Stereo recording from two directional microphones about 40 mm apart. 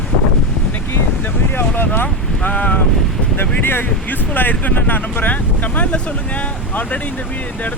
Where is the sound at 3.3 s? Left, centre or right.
Left.